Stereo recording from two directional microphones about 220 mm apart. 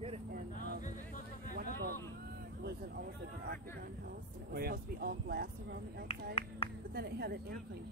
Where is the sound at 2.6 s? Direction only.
50° right (ahead or behind).